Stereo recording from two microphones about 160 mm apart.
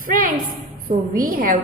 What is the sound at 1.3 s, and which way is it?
Speech, 65° right (ahead or behind).